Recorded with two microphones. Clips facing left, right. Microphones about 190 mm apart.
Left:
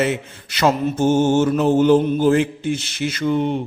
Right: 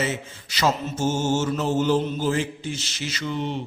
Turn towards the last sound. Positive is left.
turn(degrees=50)  # may be behind; listen again after turning